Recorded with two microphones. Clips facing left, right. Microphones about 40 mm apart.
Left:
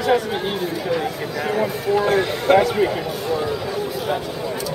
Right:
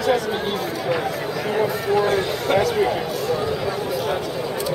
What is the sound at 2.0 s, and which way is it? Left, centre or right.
Speech, centre.